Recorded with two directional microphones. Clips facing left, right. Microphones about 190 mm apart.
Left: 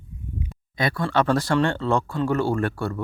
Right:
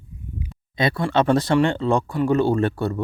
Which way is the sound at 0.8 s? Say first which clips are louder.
Right 3 dB; 20° right (ahead or behind).